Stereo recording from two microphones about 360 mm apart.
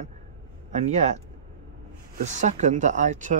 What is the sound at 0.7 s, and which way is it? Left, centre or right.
Speech, centre.